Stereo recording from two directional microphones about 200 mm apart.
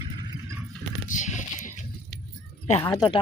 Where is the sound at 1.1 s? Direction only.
40° left (ahead or behind).